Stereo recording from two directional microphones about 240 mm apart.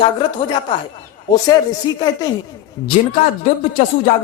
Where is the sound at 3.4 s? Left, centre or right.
Left.